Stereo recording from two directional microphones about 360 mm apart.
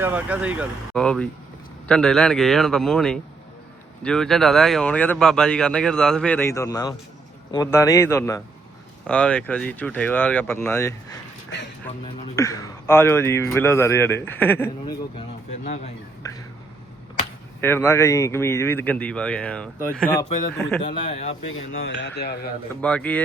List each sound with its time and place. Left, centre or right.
0.0 s a man's voice: centre
12.4 s a man's voice: centre
15.6 s speech: centre
17.6 s a man's voice: centre
20.8 s a man's voice: centre
21.5 s speech: left
22.8 s speech: centre